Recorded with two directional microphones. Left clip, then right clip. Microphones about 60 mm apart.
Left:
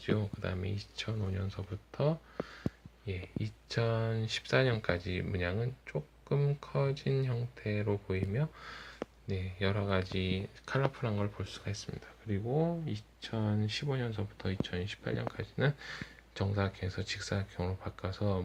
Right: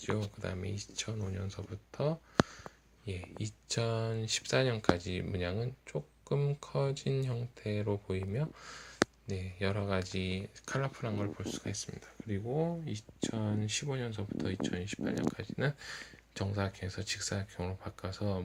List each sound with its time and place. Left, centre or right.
0.0 s speech: right
3.1 s speech: right
6.4 s speech: right
7.1 s speech: right
9.2 s speech: right
11.0 s speech: centre
13.2 s speech: right; by 18.4 s centre